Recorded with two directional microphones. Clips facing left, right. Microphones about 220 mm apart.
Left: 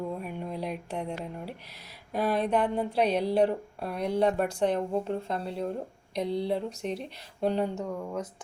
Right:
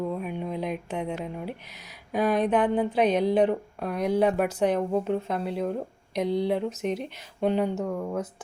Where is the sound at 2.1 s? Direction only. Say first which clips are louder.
Right 3 dB; centre (ahead or behind).